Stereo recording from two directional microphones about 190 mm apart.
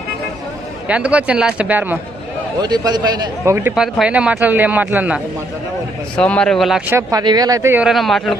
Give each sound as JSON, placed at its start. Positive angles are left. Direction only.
{"t": 0.8, "sound": "speech", "side_deg": -5}
{"t": 2.6, "sound": "a man's voice", "side_deg": -20}
{"t": 6.1, "sound": "a man's voice", "side_deg": 5}
{"t": 6.9, "sound": "speech", "side_deg": -15}